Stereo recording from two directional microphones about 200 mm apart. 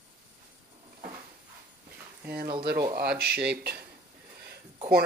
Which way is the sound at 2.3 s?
50° right (ahead or behind).